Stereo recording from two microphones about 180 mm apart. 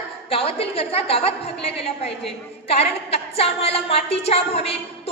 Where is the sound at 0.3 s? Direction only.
30° left (ahead or behind).